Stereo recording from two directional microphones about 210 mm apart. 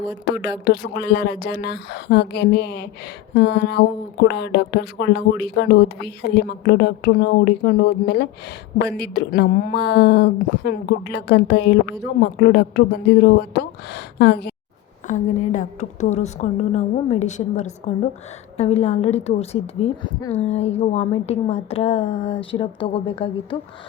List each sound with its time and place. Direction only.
0.3 s speech: 50° left (ahead or behind)
15.0 s a woman's voice: 35° left (ahead or behind)